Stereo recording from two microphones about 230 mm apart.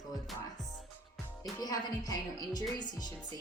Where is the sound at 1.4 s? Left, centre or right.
Centre.